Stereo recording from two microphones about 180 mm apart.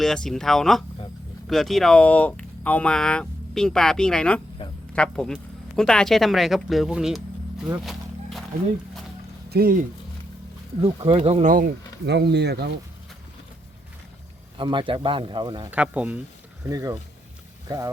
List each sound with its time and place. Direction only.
0.0 s speech: 5° left (ahead or behind)
4.6 s quack: 30° left (ahead or behind)
4.9 s speech: 5° left (ahead or behind)
7.9 s a sound: centre (ahead or behind)
9.5 s speech: 55° right (ahead or behind)
10.8 s speech: 30° right (ahead or behind)
11.5 s speech: 55° right (ahead or behind)
14.6 s speech: 25° right (ahead or behind)
15.7 s speech: 5° right (ahead or behind)
16.6 s speech: 20° right (ahead or behind)